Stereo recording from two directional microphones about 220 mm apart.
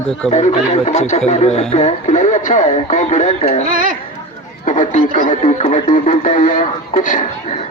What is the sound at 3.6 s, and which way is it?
Speech, 40° right (ahead or behind).